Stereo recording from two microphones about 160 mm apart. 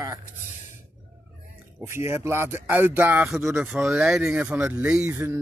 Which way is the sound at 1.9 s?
15° right (ahead or behind).